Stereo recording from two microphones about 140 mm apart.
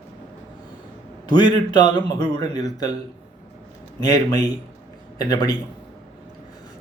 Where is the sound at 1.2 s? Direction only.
30° left (ahead or behind).